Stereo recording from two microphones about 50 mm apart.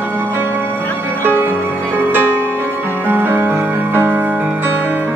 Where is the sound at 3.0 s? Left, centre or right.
Right.